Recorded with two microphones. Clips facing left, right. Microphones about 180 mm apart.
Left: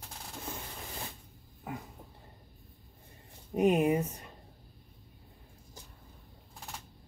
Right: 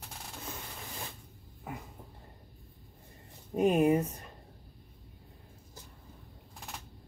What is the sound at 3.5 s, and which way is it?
Speech, 15° left (ahead or behind).